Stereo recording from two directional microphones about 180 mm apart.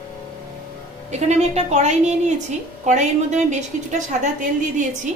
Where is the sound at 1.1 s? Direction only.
40° right (ahead or behind).